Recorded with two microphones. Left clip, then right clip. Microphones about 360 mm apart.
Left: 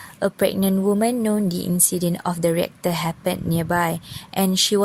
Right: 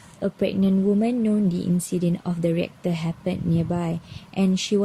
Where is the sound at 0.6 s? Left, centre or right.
Left.